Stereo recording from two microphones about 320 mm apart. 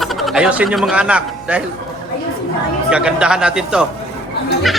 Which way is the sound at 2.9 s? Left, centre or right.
Centre.